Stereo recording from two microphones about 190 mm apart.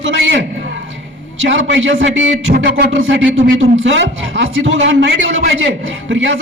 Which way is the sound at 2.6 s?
60° right (ahead or behind).